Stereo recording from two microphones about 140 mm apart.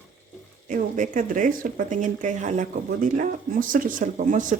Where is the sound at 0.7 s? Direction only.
65° right (ahead or behind).